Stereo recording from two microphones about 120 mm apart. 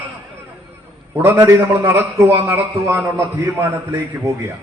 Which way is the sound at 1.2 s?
15° right (ahead or behind).